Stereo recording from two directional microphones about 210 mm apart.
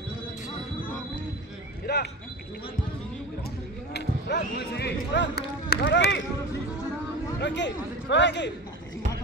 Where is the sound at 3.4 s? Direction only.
55° left (ahead or behind).